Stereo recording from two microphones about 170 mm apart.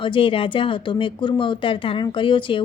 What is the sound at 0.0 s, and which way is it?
A woman's voice, 30° left (ahead or behind).